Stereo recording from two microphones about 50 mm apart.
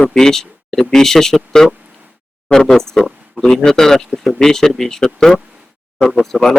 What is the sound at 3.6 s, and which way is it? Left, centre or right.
A man's voice, centre.